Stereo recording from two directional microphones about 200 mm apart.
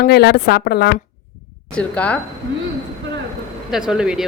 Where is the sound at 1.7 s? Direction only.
5° left (ahead or behind).